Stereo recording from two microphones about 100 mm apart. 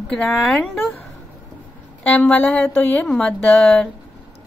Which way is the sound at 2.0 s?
15° left (ahead or behind).